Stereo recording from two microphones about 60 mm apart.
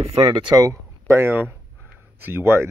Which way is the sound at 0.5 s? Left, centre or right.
Right.